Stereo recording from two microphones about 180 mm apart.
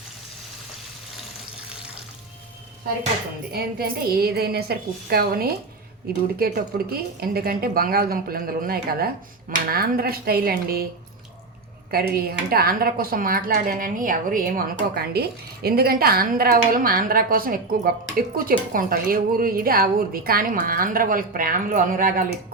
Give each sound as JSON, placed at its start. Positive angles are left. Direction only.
{"t": 3.5, "sound": "a woman's voice", "side_deg": -55}
{"t": 11.9, "sound": "speech", "side_deg": -60}